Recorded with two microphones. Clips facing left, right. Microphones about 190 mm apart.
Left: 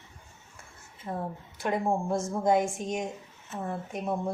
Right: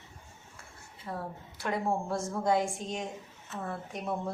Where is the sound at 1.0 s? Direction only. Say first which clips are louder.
Left 4 dB; 20° left (ahead or behind).